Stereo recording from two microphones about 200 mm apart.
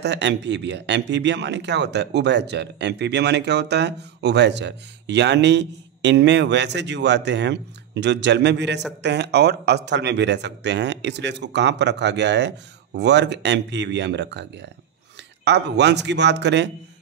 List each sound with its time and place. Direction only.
0.0 s speech: 60° right (ahead or behind)